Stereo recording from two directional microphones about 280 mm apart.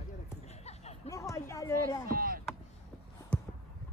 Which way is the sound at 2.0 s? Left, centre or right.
Right.